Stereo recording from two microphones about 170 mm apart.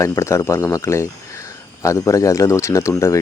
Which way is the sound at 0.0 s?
15° left (ahead or behind).